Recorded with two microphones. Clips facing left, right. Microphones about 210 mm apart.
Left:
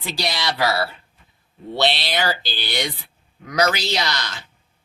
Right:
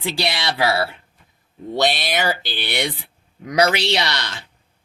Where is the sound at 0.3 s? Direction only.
25° right (ahead or behind).